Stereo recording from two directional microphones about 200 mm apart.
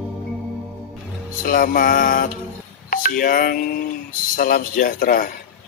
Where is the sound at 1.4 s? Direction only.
45° left (ahead or behind).